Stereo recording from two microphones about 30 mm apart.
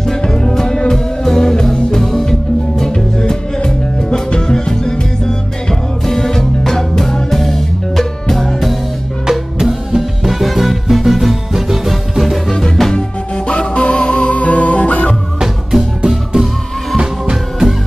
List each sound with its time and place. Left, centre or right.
0.0 s music: centre
2.8 s music: left
9.6 s music: centre
10.4 s music: centre
12.4 s music: centre
13.5 s music: left
14.3 s music: left
15.4 s music: centre
16.3 s music: right